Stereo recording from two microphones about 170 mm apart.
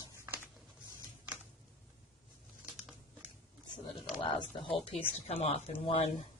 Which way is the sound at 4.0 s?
30° left (ahead or behind).